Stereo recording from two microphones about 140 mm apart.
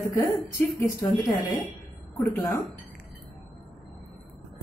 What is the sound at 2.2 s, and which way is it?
Speech, 25° left (ahead or behind).